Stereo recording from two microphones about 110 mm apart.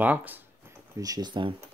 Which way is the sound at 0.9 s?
35° right (ahead or behind).